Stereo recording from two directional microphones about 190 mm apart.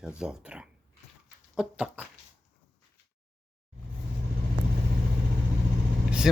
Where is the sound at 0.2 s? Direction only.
5° right (ahead or behind).